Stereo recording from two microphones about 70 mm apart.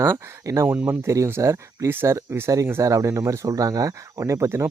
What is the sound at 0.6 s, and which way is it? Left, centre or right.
Speech, right.